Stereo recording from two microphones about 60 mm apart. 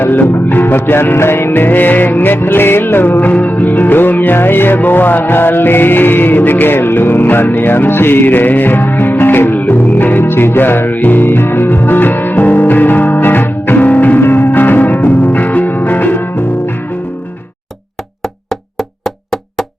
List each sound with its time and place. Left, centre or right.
0.0 s music: left
18.8 s wood block: centre